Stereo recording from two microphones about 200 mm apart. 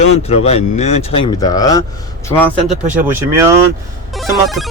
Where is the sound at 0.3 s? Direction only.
30° left (ahead or behind).